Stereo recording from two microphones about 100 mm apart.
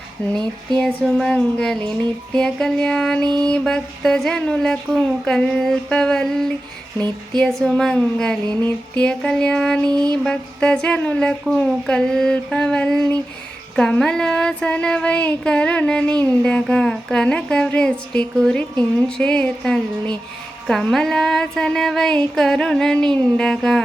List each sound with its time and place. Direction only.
0.2 s speech: 10° left (ahead or behind)
9.9 s a sound: 45° right (ahead or behind)
10.2 s speech: 10° left (ahead or behind)